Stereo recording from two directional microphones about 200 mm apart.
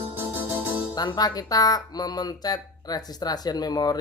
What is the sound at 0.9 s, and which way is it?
Speech, 20° left (ahead or behind).